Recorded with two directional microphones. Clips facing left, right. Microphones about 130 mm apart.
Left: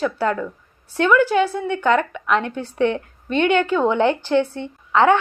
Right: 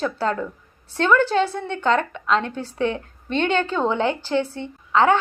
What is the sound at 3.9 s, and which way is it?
Speech, 15° right (ahead or behind).